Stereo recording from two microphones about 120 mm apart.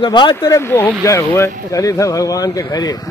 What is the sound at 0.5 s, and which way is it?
Speech, 20° left (ahead or behind).